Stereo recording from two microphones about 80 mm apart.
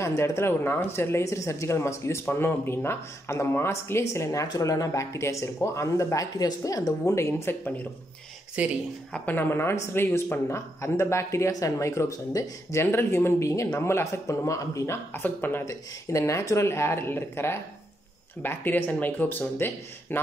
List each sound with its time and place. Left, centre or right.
0.0 s speech: left
8.6 s speech: centre
9.1 s speech: left
15.1 s speech: left
15.6 s speech: left